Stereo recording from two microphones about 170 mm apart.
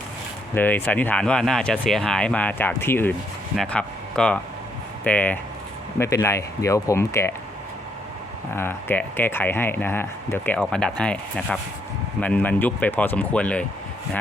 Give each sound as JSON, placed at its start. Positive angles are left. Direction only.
{"t": 0.5, "sound": "speech", "side_deg": 10}
{"t": 8.5, "sound": "speech", "side_deg": 15}